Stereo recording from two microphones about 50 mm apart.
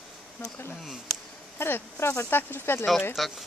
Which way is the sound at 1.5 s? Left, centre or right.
Left.